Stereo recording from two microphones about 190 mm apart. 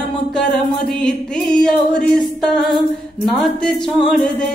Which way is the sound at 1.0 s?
5° left (ahead or behind).